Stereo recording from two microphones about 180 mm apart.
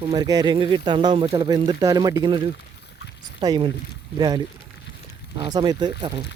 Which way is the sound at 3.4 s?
25° right (ahead or behind).